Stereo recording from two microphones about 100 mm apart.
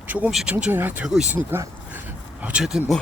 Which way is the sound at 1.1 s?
5° right (ahead or behind).